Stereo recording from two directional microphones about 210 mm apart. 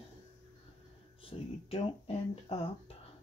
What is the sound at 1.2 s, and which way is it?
Speech, 25° left (ahead or behind).